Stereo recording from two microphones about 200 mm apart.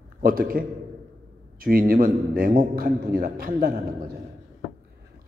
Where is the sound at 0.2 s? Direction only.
45° right (ahead or behind).